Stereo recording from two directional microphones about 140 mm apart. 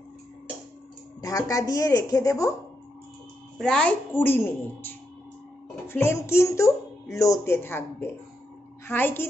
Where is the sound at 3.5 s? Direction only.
5° left (ahead or behind).